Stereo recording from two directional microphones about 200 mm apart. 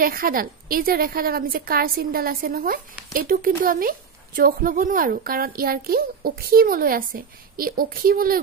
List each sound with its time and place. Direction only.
0.0 s a woman's voice: 45° right (ahead or behind)